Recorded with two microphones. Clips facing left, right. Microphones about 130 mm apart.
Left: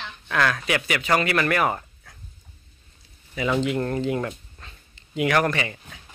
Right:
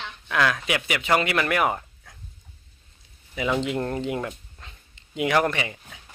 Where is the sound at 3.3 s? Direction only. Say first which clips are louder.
Left 2 dB; 15° right (ahead or behind).